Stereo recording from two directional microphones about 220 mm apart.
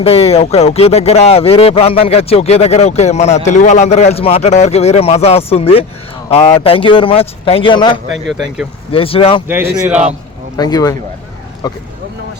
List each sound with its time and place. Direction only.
0.0 s speech: 25° left (ahead or behind)
9.5 s a man's voice: 10° right (ahead or behind)
10.6 s speech: 15° left (ahead or behind)